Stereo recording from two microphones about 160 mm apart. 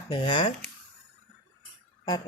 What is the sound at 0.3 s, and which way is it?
Speech, 30° left (ahead or behind).